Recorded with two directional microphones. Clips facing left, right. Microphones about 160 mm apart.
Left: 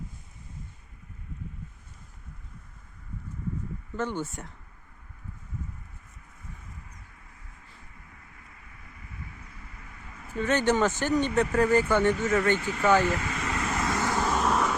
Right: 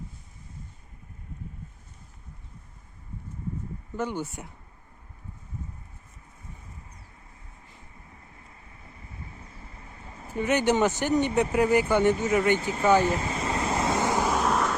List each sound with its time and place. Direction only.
3.9 s speech: 10° right (ahead or behind)
7.9 s vehicle: 30° right (ahead or behind)
10.4 s speech: 15° right (ahead or behind)
13.1 s vehicle: 30° right (ahead or behind)
14.3 s vehicle: centre (ahead or behind)